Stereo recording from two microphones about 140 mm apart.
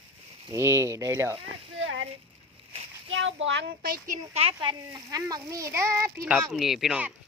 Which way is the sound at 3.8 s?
90° right.